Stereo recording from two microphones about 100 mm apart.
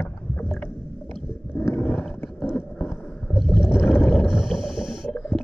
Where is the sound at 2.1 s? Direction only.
20° left (ahead or behind).